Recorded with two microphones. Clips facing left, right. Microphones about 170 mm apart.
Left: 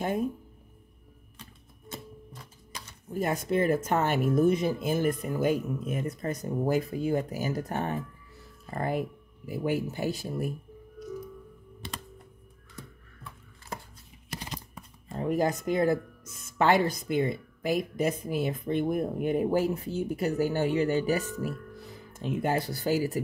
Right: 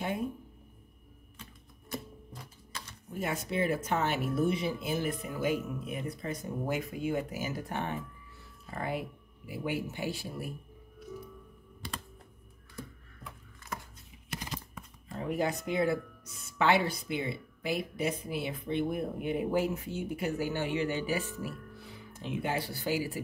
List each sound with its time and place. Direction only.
1.9 s typewriter: 20° left (ahead or behind)
2.7 s a sound: 15° left (ahead or behind)
3.2 s speech: 45° left (ahead or behind)
11.8 s computer keyboard: 25° left (ahead or behind)
14.3 s speech: 30° left (ahead or behind)